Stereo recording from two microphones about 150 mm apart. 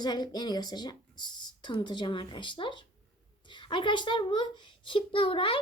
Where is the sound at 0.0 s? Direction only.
30° left (ahead or behind).